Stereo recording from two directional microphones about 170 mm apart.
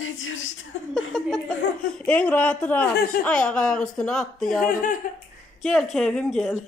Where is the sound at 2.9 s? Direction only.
65° left (ahead or behind).